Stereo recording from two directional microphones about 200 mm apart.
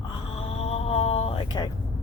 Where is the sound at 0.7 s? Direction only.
30° left (ahead or behind).